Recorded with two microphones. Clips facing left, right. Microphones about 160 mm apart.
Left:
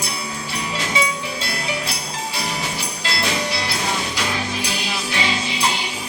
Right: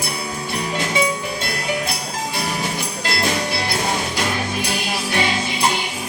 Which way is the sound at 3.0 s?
50° right (ahead or behind).